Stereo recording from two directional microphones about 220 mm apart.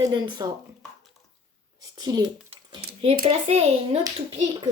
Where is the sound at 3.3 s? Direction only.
30° right (ahead or behind).